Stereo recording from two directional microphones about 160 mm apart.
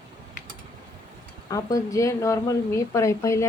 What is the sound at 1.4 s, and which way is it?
A woman's voice, 20° left (ahead or behind).